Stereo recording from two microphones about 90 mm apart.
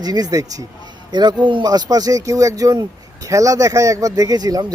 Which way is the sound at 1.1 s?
50° right (ahead or behind).